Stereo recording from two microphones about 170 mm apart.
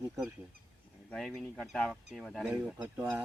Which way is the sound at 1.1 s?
5° left (ahead or behind).